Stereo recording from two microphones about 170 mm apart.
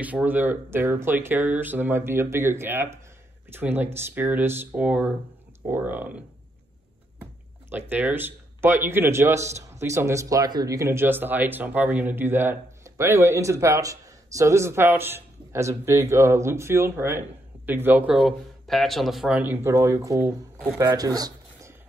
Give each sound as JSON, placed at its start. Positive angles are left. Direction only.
{"t": 0.0, "sound": "a man's voice", "side_deg": -10}
{"t": 7.7, "sound": "a man's voice", "side_deg": -10}